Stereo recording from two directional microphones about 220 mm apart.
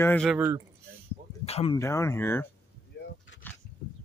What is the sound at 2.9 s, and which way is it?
Vehicle, 50° left (ahead or behind).